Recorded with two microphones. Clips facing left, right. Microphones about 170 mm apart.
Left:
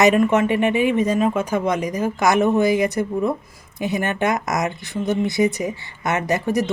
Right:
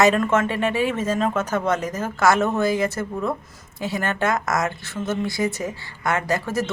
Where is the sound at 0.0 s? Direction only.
15° left (ahead or behind).